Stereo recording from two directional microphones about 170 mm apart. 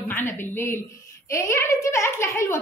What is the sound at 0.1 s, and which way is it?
A woman's voice, 15° left (ahead or behind).